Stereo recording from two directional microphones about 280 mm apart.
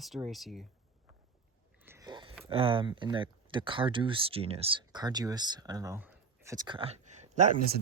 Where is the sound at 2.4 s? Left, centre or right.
Centre.